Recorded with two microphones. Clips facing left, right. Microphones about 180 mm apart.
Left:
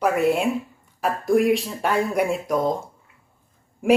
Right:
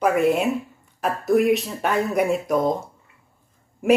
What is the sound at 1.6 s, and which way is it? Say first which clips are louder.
Speech: even; 5° right (ahead or behind).